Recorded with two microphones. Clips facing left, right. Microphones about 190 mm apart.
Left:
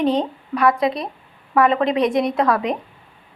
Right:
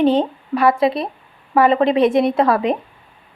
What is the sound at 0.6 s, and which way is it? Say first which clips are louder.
Speech: right 2 dB; 30° right (ahead or behind).